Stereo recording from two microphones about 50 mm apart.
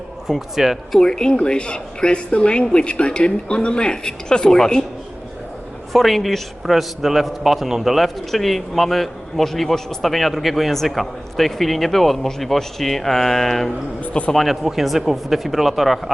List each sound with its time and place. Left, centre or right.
0.3 s speech: centre
0.9 s speech: centre
5.9 s a man's voice: centre
14.1 s a man's voice: centre
14.3 s a man's voice: centre